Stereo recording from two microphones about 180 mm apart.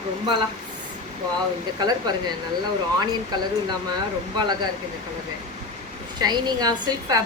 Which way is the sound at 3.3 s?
20° right (ahead or behind).